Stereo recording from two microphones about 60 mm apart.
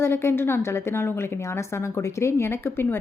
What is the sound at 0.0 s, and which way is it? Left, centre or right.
A woman's voice, left.